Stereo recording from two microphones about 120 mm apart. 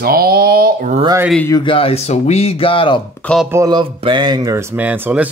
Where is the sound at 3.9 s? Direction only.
40° right (ahead or behind).